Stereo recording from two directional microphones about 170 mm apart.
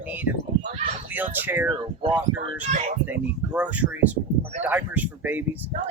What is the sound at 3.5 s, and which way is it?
Speech, 10° right (ahead or behind).